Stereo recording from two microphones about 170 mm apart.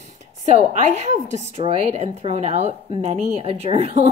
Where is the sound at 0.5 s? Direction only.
40° right (ahead or behind).